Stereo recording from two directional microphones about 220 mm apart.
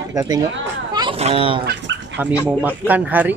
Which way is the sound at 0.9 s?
25° right (ahead or behind).